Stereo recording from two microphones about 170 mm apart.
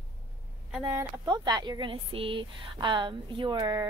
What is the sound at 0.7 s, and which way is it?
Speech, 10° right (ahead or behind).